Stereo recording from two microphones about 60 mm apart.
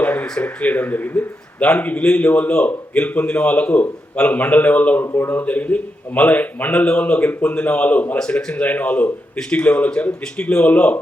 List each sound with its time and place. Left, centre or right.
0.0 s a sound: left
0.4 s a man's voice: left
8.2 s a man's voice: centre